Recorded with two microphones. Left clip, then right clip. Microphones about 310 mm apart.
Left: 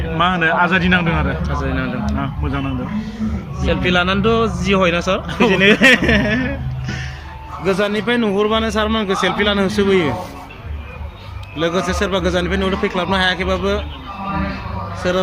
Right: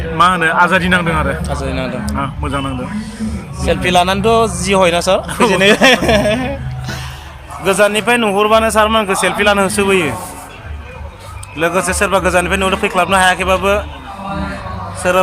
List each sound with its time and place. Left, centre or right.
0.2 s a man's voice: centre
1.4 s speech: centre
2.0 s a man's voice: centre
3.6 s a man's voice: centre
11.5 s a man's voice: centre
15.0 s a man's voice: centre